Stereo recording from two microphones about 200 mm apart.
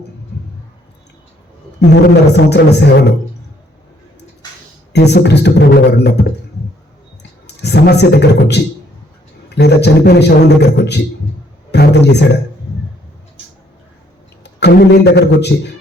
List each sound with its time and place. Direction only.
1.9 s a man's voice: 55° left (ahead or behind)
4.4 s a sound: 20° left (ahead or behind)
4.9 s a man's voice: 55° left (ahead or behind)
14.6 s a man's voice: 55° left (ahead or behind)